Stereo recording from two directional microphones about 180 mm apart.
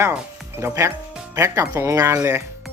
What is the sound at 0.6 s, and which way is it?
Speech, 15° right (ahead or behind).